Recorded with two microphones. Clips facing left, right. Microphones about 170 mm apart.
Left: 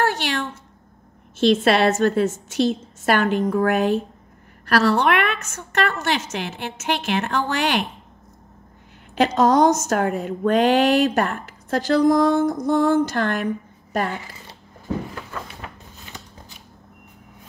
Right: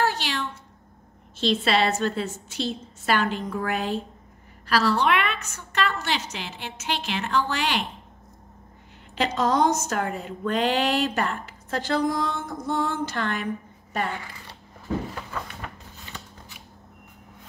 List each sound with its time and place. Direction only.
0.0 s a sound: 55° left (ahead or behind)
1.4 s a woman's voice: 50° left (ahead or behind)
9.1 s a woman's voice: 45° left (ahead or behind)
14.1 s speech: 25° left (ahead or behind)